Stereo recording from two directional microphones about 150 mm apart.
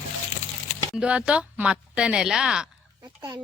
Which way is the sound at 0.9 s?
5° right (ahead or behind).